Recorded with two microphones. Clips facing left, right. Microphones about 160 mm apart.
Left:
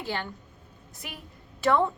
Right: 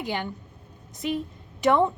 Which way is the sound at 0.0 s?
15° right (ahead or behind).